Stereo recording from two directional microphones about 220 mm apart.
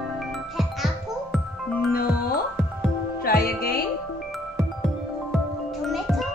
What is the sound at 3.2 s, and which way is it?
Music, 40° left (ahead or behind).